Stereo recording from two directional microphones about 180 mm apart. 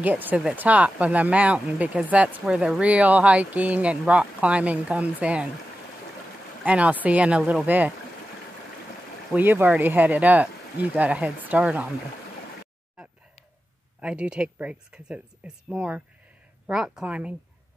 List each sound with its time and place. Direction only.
0.0 s speech: 10° right (ahead or behind)
6.6 s speech: 10° right (ahead or behind)
9.3 s speech: 10° right (ahead or behind)
14.0 s speech: 5° right (ahead or behind)